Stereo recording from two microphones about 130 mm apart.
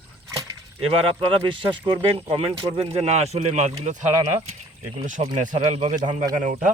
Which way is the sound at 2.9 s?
55° right (ahead or behind).